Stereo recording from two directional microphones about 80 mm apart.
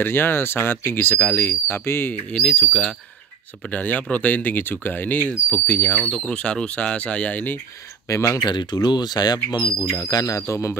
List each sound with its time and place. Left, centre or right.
0.0 s speech: left
2.3 s speech: centre
3.6 s speech: centre
8.1 s speech: left
8.5 s speech: left